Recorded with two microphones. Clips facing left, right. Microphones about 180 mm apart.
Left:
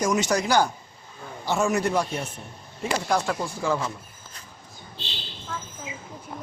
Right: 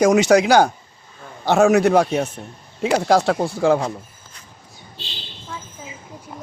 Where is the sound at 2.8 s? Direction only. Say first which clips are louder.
Right 8 dB; 90° right.